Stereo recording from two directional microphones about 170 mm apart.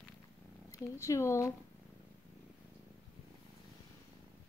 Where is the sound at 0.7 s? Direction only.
15° left (ahead or behind).